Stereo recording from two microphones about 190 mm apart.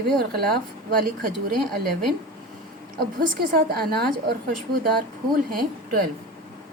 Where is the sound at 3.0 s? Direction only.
50° right (ahead or behind).